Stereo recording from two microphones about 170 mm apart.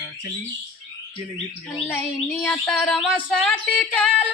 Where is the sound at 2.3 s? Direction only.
5° left (ahead or behind).